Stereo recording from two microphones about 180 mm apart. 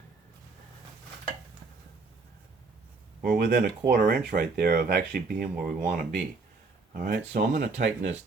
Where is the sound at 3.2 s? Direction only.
55° right (ahead or behind).